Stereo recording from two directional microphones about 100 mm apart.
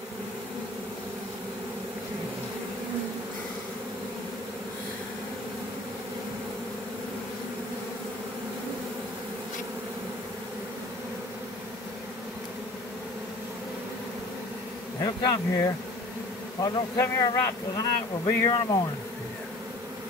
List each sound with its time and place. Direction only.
15.0 s speech: 30° left (ahead or behind)